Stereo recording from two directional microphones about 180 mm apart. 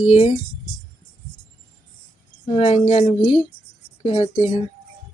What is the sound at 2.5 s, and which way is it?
Speech, 35° left (ahead or behind).